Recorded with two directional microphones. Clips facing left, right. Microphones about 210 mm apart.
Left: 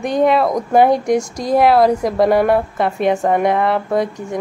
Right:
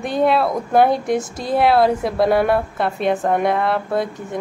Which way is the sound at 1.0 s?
40° left (ahead or behind).